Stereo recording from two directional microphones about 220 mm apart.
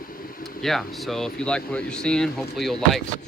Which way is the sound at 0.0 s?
40° left (ahead or behind).